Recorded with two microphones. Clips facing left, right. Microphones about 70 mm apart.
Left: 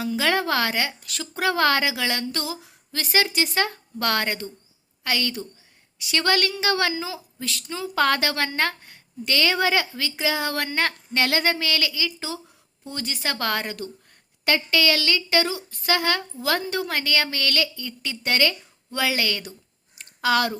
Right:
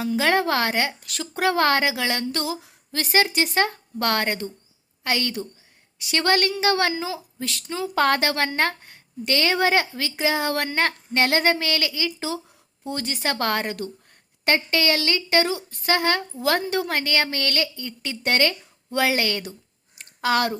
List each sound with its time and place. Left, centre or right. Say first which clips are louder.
0.0 s a woman's voice: right 2 dB; right
14.4 s a woman's voice: even; right
16.4 s a woman's voice: right 4 dB; right
16.9 s a woman's voice: right 1 dB; right